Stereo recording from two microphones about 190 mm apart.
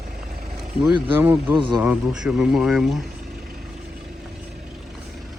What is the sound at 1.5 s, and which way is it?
Speech, 25° right (ahead or behind).